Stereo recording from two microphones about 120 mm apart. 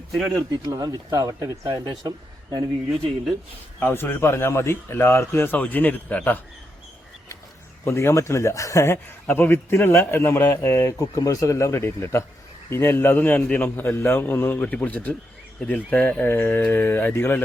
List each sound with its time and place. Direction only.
0.3 s speech: 35° right (ahead or behind)
3.8 s speech: 20° left (ahead or behind)
7.9 s a man's voice: 25° left (ahead or behind)